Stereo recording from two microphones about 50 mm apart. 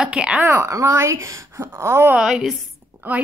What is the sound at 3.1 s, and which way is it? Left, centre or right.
Speech, right.